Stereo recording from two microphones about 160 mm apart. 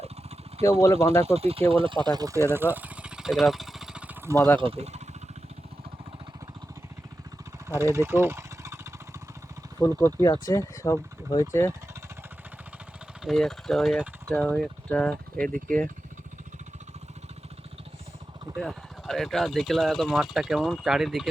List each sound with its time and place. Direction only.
0.6 s speech: 20° left (ahead or behind)
1.2 s speech: 40° right (ahead or behind); by 2.6 s 15° right (ahead or behind)
2.7 s a sound: 10° right (ahead or behind)
4.6 s speech: 40° right (ahead or behind)
7.7 s a sound: 20° right (ahead or behind)
9.7 s speech: 20° left (ahead or behind)
13.2 s speech: centre (ahead or behind)
18.5 s speech: centre (ahead or behind)